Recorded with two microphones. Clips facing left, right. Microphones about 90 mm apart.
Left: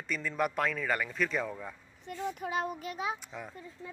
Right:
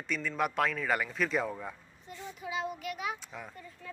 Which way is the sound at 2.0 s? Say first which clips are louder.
Left 7 dB; 55° left (ahead or behind).